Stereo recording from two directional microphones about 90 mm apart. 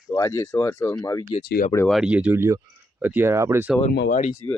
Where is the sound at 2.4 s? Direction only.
35° right (ahead or behind).